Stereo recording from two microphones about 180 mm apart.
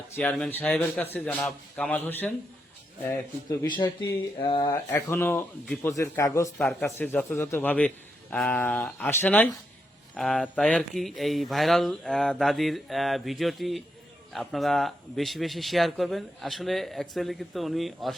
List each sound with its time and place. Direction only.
0.2 s a man's voice: 5° left (ahead or behind)
3.6 s a sound: 25° left (ahead or behind)
4.7 s a man's voice: 15° left (ahead or behind)
6.6 s a man's voice: centre (ahead or behind)